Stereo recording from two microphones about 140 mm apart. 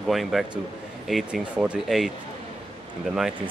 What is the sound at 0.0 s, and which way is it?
Speech, centre (ahead or behind).